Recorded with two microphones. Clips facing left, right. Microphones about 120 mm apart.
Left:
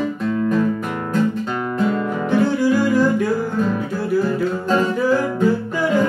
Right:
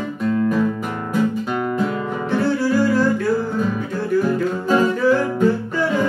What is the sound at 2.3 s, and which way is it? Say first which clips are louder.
Music: left 2 dB; 15° left (ahead or behind).